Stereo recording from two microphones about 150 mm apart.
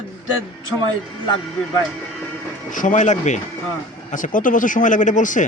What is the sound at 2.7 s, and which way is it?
A man's voice, 55° left (ahead or behind).